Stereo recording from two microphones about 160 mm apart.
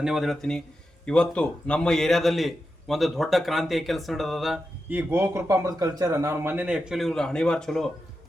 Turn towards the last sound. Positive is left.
turn(degrees=5)  # may be behind; listen again after turning